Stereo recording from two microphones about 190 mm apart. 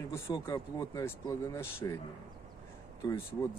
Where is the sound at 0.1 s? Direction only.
15° left (ahead or behind).